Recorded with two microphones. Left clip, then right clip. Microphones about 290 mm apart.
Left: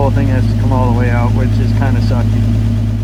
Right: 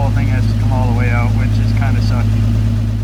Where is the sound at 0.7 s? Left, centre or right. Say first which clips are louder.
Left 6 dB; right.